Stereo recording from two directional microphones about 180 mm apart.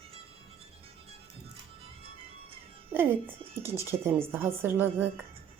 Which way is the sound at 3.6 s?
15° right (ahead or behind).